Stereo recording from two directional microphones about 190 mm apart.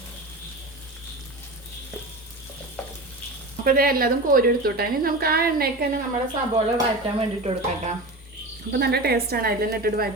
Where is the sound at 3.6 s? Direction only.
50° right (ahead or behind).